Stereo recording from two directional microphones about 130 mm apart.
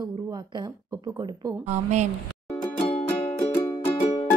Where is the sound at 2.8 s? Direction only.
50° left (ahead or behind).